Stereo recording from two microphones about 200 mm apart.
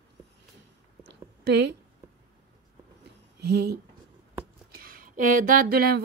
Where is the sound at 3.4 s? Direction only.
55° right (ahead or behind).